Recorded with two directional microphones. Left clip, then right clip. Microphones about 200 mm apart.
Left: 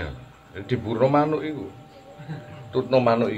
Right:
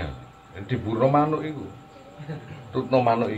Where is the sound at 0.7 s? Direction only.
55° left (ahead or behind).